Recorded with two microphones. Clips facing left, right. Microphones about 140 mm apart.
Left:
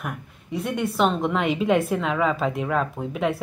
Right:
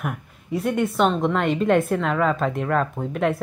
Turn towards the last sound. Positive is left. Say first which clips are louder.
# right 2 dB
turn(degrees=0)  # may be behind; listen again after turning